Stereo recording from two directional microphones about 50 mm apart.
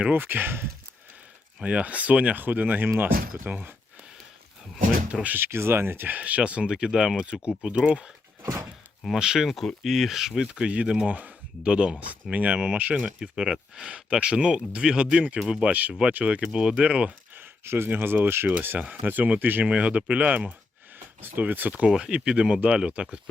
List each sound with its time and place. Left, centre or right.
0.1 s speech: right
1.6 s speech: right
5.4 s speech: right
6.1 s speech: right
9.5 s speech: centre; by 13.1 s right
13.1 s speech: centre
15.4 s speech: centre
15.6 s speech: right
17.3 s speech: right
19.0 s speech: right
19.6 s speech: right
21.2 s speech: right
21.8 s speech: centre